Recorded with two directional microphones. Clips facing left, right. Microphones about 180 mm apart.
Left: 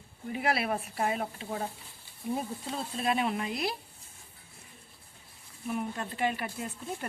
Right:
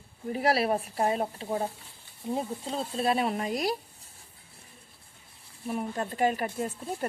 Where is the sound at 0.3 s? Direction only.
35° right (ahead or behind).